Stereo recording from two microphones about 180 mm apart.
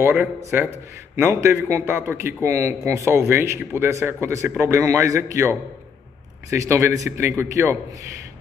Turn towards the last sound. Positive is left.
turn(degrees=-15)  # may be behind; listen again after turning